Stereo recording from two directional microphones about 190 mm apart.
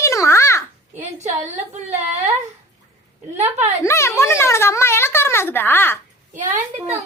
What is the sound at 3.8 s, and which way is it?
Speech, 15° left (ahead or behind).